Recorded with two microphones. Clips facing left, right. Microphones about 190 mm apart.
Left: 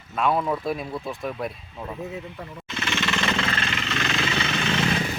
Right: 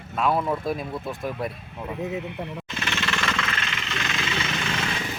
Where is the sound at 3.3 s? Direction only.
30° left (ahead or behind).